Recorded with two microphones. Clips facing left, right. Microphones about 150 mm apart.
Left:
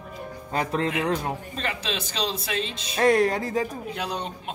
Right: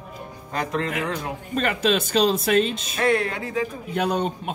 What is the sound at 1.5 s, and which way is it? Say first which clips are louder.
Speech: right 9 dB; 55° right (ahead or behind).